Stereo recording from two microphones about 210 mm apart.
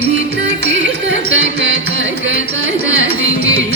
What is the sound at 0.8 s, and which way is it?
Music, 60° right (ahead or behind).